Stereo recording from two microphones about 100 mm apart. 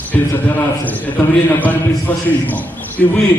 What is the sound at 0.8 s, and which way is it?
A man's voice, 15° left (ahead or behind).